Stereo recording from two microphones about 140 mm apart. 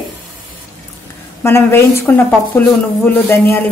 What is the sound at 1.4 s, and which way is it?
Speech, 15° left (ahead or behind).